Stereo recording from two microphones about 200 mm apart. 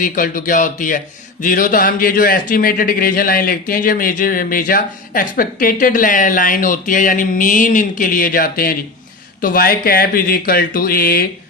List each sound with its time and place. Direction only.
0.0 s a man's voice: 45° left (ahead or behind)